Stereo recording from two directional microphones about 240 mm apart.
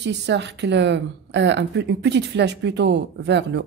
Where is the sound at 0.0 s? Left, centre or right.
Right.